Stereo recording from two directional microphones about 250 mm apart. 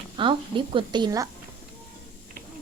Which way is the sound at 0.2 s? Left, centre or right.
Centre.